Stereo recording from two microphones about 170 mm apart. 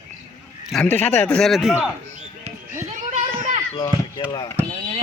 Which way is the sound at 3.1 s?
50° right (ahead or behind).